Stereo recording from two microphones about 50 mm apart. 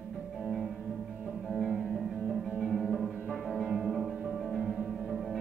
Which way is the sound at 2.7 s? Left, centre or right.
Centre.